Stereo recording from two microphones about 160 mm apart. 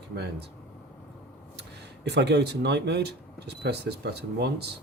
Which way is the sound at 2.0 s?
90° right.